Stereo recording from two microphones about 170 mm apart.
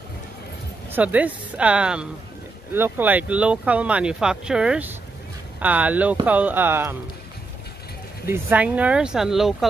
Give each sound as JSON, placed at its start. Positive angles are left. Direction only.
{"t": 0.8, "sound": "speech", "side_deg": -10}
{"t": 8.3, "sound": "speech", "side_deg": -10}